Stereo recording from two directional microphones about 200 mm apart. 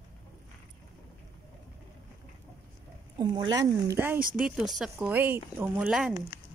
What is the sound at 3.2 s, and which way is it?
Speech, 20° right (ahead or behind).